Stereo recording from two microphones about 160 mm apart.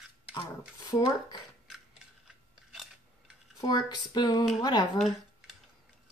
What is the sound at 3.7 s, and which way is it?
Speech, 25° left (ahead or behind).